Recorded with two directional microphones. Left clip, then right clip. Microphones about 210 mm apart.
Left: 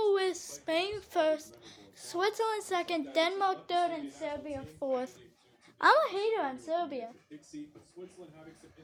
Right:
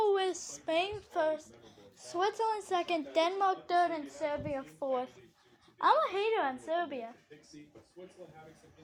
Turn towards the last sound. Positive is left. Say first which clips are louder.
# left 1 dB
turn(degrees=20)  # may be behind; listen again after turning